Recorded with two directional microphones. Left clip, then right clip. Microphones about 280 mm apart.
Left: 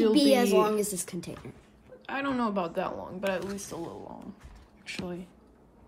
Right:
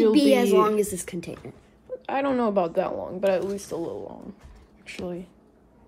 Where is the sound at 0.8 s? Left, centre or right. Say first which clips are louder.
Right 4 dB; right.